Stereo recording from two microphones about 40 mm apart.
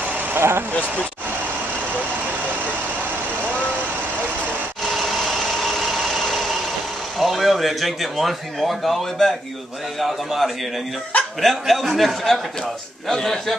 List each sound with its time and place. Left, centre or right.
0.4 s speech: right
4.9 s vehicle: centre
7.2 s a man's voice: centre